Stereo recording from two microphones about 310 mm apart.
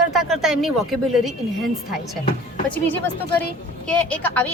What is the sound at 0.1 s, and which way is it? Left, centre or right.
Speech, centre.